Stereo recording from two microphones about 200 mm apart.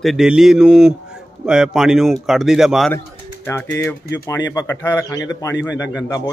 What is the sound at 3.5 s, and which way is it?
Speech, 10° left (ahead or behind).